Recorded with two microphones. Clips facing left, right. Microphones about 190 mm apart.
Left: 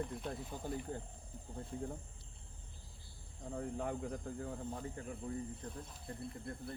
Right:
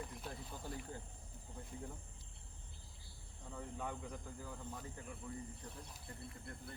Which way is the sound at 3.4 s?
45° left (ahead or behind).